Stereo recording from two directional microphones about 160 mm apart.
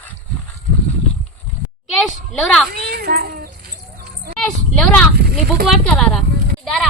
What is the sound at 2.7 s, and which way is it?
Speech, 75° right (ahead or behind).